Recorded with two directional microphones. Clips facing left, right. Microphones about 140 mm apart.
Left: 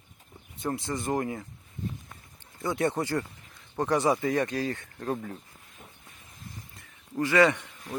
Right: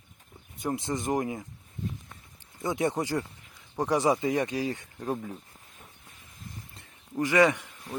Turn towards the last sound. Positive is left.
turn(degrees=-15)  # may be behind; listen again after turning